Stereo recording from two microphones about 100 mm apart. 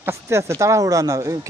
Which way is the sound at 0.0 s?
25° right (ahead or behind).